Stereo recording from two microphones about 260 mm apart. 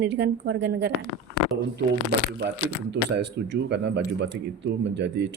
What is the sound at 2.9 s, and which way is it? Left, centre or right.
Speech, right.